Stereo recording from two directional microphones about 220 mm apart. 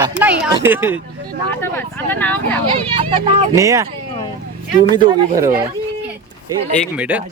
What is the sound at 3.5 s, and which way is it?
Speech, 15° right (ahead or behind).